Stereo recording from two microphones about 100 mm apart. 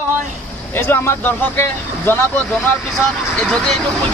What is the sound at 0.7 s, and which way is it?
Speech, 20° left (ahead or behind).